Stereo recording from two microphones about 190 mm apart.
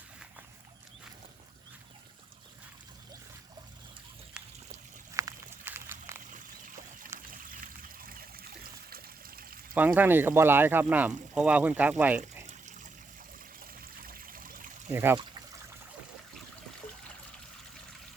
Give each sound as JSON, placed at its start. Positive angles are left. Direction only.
{"t": 5.1, "sound": "a sound", "side_deg": -15}
{"t": 7.1, "sound": "trickle", "side_deg": -15}
{"t": 7.8, "sound": "trickle", "side_deg": -50}
{"t": 9.7, "sound": "speech", "side_deg": -10}
{"t": 12.5, "sound": "water", "side_deg": -40}
{"t": 14.0, "sound": "trickle", "side_deg": -50}
{"t": 14.9, "sound": "speech", "side_deg": -10}